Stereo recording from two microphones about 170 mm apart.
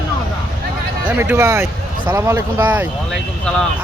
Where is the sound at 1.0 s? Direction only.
10° right (ahead or behind).